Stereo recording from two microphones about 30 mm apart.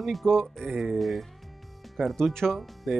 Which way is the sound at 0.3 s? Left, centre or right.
Centre.